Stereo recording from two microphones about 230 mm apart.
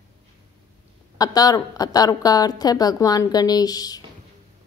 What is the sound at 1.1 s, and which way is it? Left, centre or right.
A woman's voice, centre.